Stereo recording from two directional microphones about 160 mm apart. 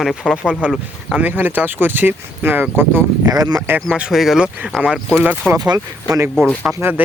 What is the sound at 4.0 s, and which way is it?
Speech, 5° right (ahead or behind).